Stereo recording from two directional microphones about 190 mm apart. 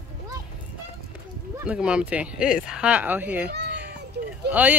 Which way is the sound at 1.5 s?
5° right (ahead or behind).